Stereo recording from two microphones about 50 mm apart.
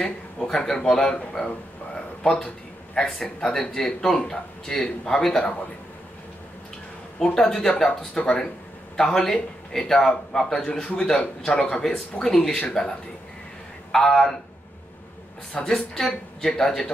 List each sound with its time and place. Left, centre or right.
0.0 s a man's voice: centre
7.2 s a man's voice: centre
12.2 s a man's voice: centre
13.9 s a man's voice: centre
15.6 s a man's voice: centre